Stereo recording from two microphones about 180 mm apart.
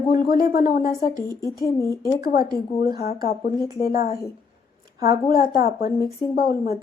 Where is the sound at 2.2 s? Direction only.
55° left (ahead or behind).